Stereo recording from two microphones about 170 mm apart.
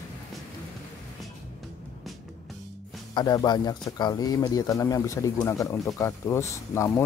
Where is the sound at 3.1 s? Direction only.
25° left (ahead or behind).